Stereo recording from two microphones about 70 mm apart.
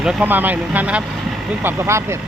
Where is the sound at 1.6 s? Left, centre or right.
Right.